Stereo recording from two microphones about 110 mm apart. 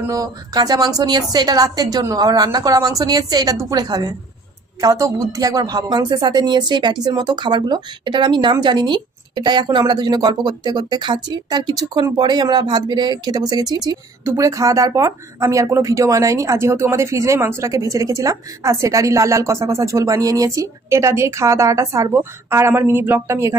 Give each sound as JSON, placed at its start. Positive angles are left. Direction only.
{"t": 0.1, "sound": "speech", "side_deg": -35}
{"t": 4.8, "sound": "speech", "side_deg": -30}